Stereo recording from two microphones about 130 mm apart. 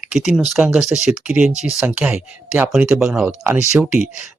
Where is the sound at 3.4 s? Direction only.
20° right (ahead or behind).